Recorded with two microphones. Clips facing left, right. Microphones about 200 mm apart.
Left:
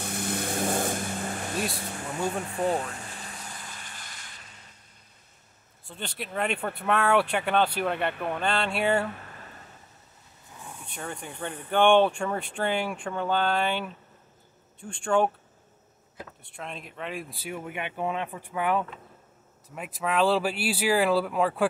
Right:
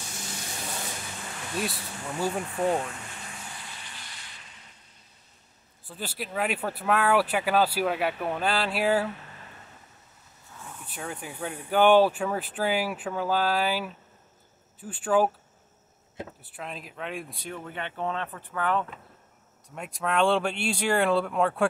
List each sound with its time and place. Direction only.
0.0 s vehicle: 60° left (ahead or behind)
1.6 s speech: 5° right (ahead or behind)
5.9 s speech: 5° right (ahead or behind)
10.9 s speech: 5° right (ahead or behind)
16.4 s speech: 5° right (ahead or behind)
19.7 s speech: centre (ahead or behind)